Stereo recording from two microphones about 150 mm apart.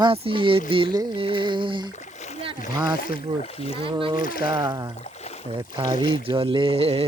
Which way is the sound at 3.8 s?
35° right (ahead or behind).